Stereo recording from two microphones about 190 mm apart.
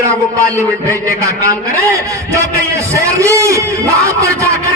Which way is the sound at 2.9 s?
15° right (ahead or behind).